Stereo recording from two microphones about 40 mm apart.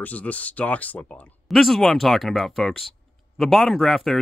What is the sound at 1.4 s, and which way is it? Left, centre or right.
Speech, centre.